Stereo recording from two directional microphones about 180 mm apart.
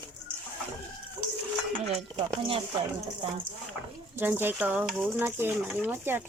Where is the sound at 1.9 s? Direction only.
30° right (ahead or behind).